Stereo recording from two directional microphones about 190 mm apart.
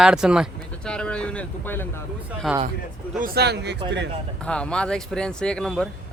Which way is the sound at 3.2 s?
55° right (ahead or behind).